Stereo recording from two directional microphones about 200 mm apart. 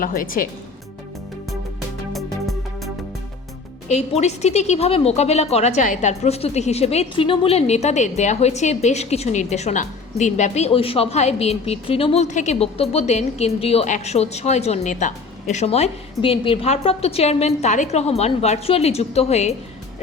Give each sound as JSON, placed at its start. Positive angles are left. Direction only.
{"t": 0.0, "sound": "a woman's voice", "side_deg": 45}
{"t": 2.1, "sound": "music", "side_deg": 0}
{"t": 3.8, "sound": "a woman's voice", "side_deg": 35}